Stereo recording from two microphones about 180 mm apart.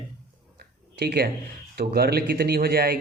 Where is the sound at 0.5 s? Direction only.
60° right (ahead or behind).